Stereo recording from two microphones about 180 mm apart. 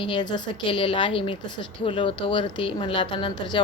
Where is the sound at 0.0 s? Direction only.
25° left (ahead or behind).